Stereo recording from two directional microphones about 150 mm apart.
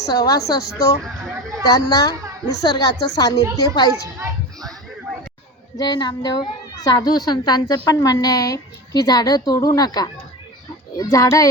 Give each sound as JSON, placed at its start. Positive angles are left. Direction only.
{"t": 0.0, "sound": "a woman's voice", "side_deg": 25}
{"t": 5.7, "sound": "a woman's voice", "side_deg": 30}